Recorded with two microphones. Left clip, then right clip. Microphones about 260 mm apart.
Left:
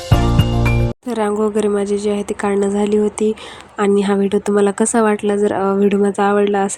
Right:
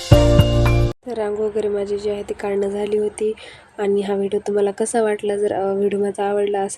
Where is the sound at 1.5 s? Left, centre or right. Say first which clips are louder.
Left 4 dB; left.